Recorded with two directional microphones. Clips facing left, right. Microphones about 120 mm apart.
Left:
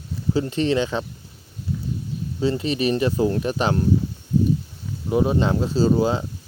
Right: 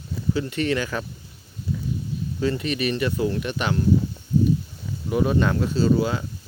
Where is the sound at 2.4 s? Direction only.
30° left (ahead or behind).